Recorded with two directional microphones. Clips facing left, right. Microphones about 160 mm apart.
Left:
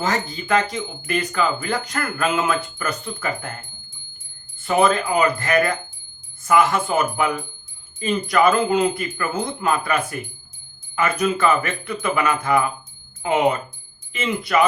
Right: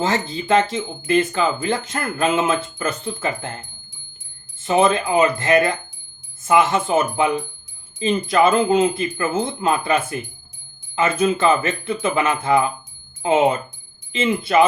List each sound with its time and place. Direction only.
0.0 s speech: 25° right (ahead or behind)